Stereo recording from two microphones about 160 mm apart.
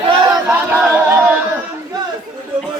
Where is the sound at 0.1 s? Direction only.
25° right (ahead or behind).